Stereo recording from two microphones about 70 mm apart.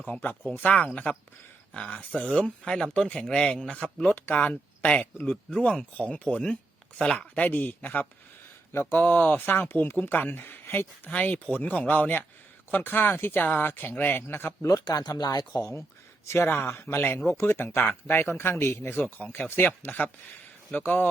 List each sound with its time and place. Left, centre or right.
0.1 s speech: left
14.7 s speech: left
16.2 s speech: left